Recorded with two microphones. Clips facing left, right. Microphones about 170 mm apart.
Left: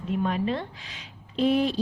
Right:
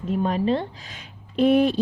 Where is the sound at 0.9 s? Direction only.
50° right (ahead or behind).